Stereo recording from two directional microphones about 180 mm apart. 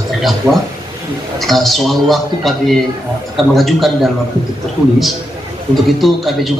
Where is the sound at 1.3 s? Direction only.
Centre (ahead or behind).